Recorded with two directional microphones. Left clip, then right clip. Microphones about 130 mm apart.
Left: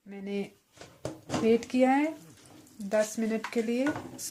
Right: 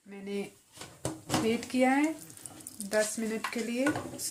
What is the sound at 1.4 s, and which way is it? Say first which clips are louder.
Speech: left 5 dB; 70° left (ahead or behind).